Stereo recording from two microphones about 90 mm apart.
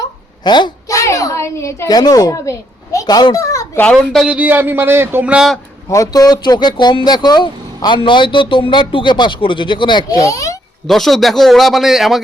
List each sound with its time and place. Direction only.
0.0 s a sound: 55° left (ahead or behind)
0.9 s a child's voice: 40° left (ahead or behind)
1.9 s a child's voice: 45° left (ahead or behind)
3.9 s a man's voice: centre (ahead or behind)
4.3 s speech: 20° right (ahead or behind)
5.2 s speech: 15° right (ahead or behind)
5.9 s speech: 40° left (ahead or behind); by 10.1 s 60° left (ahead or behind)
10.2 s a child's voice: 40° left (ahead or behind)
10.8 s a man's voice: centre (ahead or behind)